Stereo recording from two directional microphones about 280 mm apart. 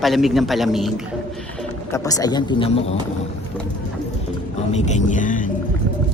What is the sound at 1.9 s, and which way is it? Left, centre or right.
Speech, centre.